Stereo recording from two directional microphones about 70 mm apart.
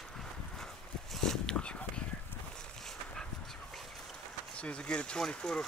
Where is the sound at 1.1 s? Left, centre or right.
Centre.